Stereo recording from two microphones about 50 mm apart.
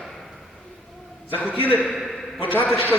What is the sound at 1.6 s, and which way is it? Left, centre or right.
Speech, left.